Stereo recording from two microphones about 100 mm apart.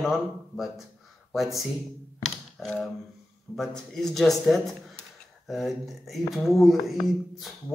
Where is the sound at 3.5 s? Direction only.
20° left (ahead or behind).